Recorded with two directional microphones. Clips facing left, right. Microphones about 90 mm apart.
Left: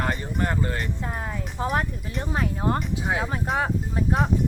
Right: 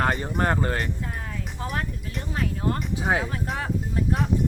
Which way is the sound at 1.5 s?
35° left (ahead or behind).